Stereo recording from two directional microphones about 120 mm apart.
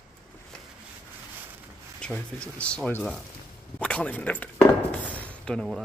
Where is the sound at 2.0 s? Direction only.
10° left (ahead or behind).